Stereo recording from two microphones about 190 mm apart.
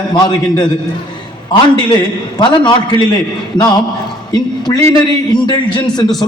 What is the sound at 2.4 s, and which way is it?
Speech, 20° left (ahead or behind).